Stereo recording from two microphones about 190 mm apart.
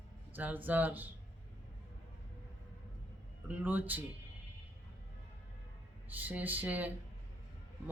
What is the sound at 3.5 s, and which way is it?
Speech, 10° right (ahead or behind).